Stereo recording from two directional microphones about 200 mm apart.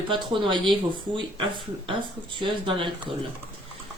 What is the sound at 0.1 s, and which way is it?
Speech, 25° right (ahead or behind).